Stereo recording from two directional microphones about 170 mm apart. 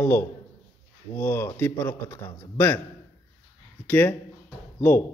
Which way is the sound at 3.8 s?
10° left (ahead or behind).